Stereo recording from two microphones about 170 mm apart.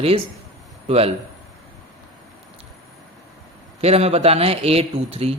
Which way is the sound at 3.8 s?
35° right (ahead or behind).